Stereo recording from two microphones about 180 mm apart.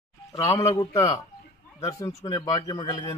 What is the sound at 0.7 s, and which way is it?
A man's voice, 20° left (ahead or behind).